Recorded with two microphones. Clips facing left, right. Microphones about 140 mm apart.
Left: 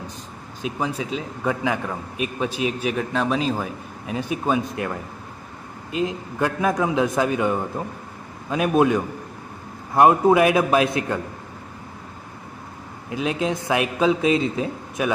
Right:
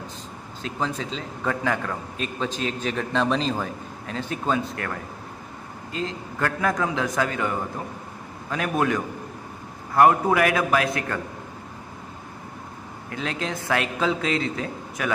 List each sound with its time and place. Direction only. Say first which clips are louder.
0.6 s a man's voice: left 2 dB; 15° left (ahead or behind)
13.1 s speech: left 6 dB; 15° left (ahead or behind)